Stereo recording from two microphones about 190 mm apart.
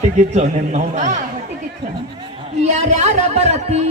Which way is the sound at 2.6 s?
35° right (ahead or behind).